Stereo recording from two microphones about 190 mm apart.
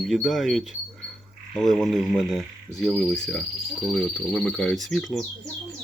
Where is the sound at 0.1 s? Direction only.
Centre (ahead or behind).